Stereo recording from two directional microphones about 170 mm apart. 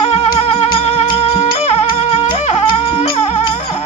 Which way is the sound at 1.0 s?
35° left (ahead or behind).